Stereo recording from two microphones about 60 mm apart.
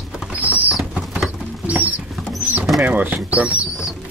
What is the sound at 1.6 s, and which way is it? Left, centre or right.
Rodents, right.